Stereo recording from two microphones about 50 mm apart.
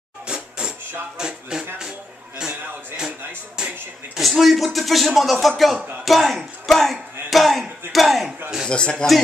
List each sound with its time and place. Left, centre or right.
0.3 s music: centre
3.5 s music: centre
4.2 s speech: centre
8.6 s speech: centre